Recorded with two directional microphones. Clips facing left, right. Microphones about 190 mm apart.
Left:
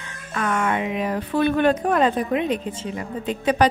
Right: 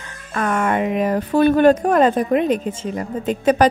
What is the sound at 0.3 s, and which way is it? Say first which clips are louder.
Speech: right 3 dB; 45° right (ahead or behind).